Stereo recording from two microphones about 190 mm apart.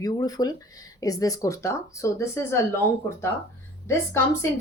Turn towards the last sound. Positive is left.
turn(degrees=15)  # may be behind; listen again after turning